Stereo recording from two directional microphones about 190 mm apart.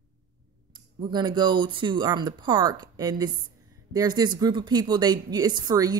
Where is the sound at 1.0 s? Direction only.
25° right (ahead or behind).